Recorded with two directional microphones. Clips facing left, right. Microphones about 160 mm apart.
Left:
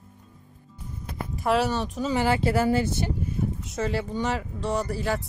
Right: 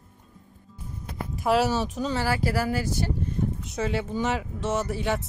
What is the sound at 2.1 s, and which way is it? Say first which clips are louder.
Speech: left 5 dB; 20° left (ahead or behind).